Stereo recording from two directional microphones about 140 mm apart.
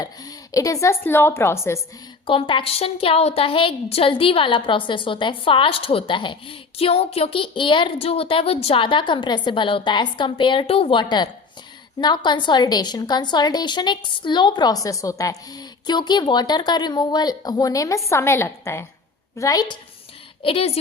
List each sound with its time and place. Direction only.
0.0 s a woman's voice: 25° left (ahead or behind)
2.2 s a woman's voice: 40° left (ahead or behind)
20.4 s a woman's voice: 45° left (ahead or behind)